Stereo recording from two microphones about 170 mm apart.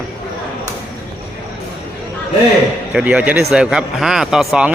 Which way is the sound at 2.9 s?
5° right (ahead or behind).